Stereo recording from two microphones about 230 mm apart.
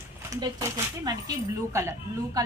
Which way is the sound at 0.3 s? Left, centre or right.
Centre.